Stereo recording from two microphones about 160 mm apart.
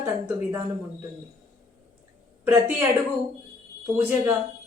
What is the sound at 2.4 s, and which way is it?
Speech, 15° right (ahead or behind).